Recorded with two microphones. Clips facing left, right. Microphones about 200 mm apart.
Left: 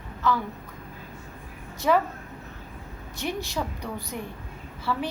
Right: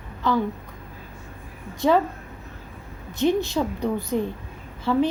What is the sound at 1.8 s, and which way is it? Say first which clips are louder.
Speech: right 3 dB; 25° right (ahead or behind).